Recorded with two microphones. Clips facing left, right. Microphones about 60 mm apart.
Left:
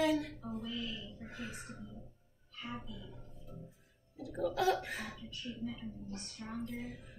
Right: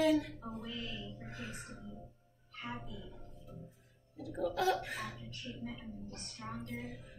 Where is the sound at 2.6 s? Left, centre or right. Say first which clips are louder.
Even; right.